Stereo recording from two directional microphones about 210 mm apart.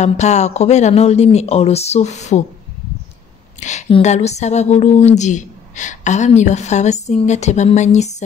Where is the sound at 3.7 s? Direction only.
30° left (ahead or behind).